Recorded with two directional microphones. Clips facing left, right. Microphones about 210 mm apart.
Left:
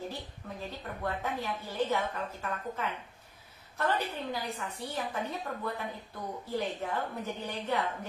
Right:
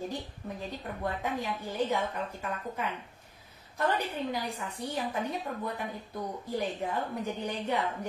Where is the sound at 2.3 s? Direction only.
15° right (ahead or behind).